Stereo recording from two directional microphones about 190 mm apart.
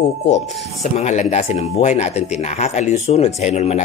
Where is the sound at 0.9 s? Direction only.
40° left (ahead or behind).